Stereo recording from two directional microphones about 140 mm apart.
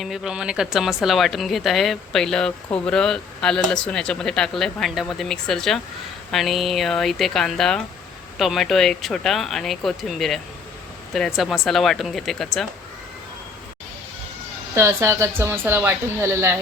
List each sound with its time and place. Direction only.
0.0 s a woman's voice: centre (ahead or behind)
14.8 s speech: 20° right (ahead or behind)